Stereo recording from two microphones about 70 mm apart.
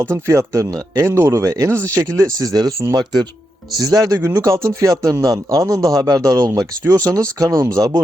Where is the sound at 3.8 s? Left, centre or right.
Right.